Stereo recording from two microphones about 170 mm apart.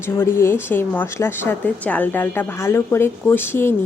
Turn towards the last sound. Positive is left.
turn(degrees=15)  # may be behind; listen again after turning